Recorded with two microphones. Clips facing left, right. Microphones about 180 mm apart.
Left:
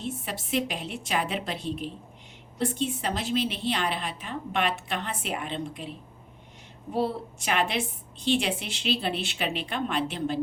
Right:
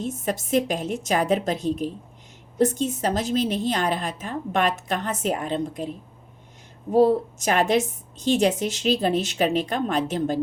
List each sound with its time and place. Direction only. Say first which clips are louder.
0.0 s a woman's voice: right 7 dB; 45° right (ahead or behind)
6.9 s a woman's voice: right 10 dB; 45° right (ahead or behind)